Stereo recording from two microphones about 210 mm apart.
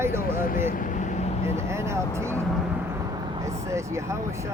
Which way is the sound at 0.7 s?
40° left (ahead or behind).